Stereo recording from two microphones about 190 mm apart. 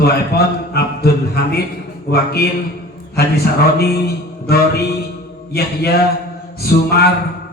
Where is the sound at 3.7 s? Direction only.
55° left (ahead or behind).